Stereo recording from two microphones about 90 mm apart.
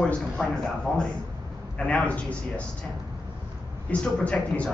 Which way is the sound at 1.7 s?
15° left (ahead or behind).